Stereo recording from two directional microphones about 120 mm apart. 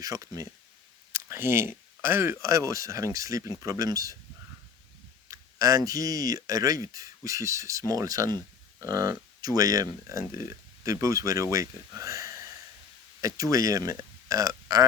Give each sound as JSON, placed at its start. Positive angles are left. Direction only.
{"t": 0.0, "sound": "speech", "side_deg": -30}
{"t": 5.3, "sound": "speech", "side_deg": -30}